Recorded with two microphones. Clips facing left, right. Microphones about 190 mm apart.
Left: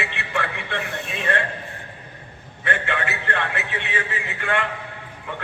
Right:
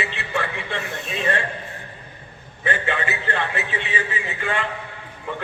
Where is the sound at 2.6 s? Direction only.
60° left (ahead or behind).